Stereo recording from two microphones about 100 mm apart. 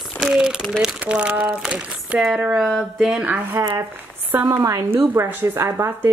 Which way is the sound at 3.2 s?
15° right (ahead or behind).